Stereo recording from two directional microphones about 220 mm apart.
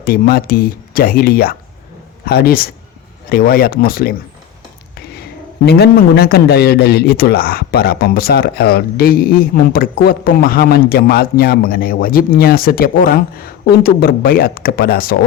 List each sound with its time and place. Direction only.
0.0 s a man's voice: 40° left (ahead or behind)
5.6 s a man's voice: 45° left (ahead or behind)